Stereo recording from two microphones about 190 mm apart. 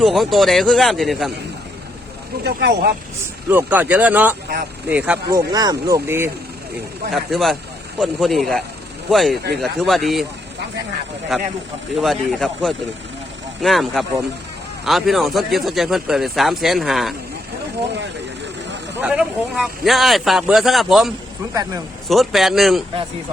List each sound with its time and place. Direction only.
0.0 s speech: centre (ahead or behind)
2.4 s speech: 60° right (ahead or behind)
3.5 s speech: 10° right (ahead or behind)
5.3 s speech: 20° right (ahead or behind)
7.1 s speech: centre (ahead or behind)
11.3 s speech: centre (ahead or behind)
18.9 s speech: 5° right (ahead or behind)
21.5 s a man's voice: 20° right (ahead or behind)
22.1 s speech: centre (ahead or behind)